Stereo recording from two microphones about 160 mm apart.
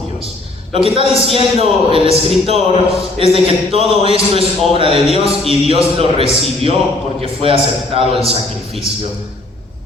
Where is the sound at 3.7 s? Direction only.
35° right (ahead or behind).